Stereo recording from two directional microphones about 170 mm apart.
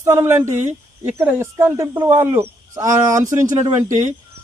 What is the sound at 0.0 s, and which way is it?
Speech, 15° right (ahead or behind).